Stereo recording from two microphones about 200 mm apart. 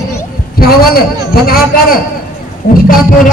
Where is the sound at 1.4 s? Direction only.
50° left (ahead or behind).